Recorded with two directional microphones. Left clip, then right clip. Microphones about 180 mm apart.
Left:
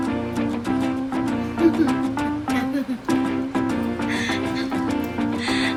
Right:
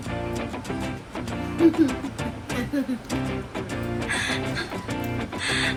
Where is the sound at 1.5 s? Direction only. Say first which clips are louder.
Even; centre (ahead or behind).